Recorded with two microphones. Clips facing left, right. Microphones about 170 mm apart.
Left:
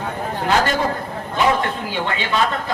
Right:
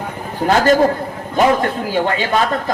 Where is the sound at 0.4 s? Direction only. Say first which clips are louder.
Right 7 dB; 45° right (ahead or behind).